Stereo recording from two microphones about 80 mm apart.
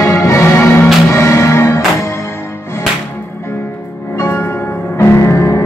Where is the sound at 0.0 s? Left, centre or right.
Left.